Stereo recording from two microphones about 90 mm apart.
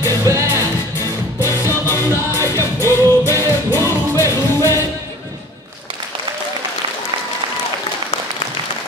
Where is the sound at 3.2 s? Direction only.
35° right (ahead or behind).